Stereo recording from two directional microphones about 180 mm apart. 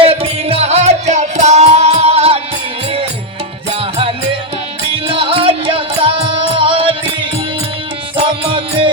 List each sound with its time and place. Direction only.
0.0 s music: 30° right (ahead or behind)
3.7 s music: 30° right (ahead or behind)
8.1 s music: 30° right (ahead or behind)